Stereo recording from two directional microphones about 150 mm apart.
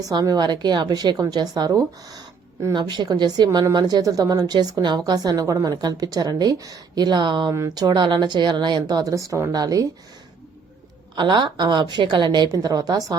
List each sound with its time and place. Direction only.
0.0 s a woman's voice: 25° right (ahead or behind)
11.1 s a woman's voice: 30° right (ahead or behind)